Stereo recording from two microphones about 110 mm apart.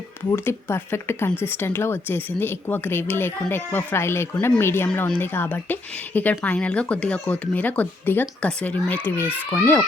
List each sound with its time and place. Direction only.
0.3 s speech: 20° left (ahead or behind)